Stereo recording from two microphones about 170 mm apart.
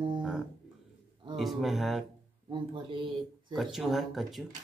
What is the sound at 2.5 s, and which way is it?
Speech, 30° right (ahead or behind).